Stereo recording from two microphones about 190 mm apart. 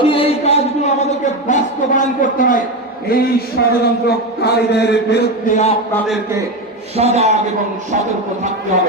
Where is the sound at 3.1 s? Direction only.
50° left (ahead or behind).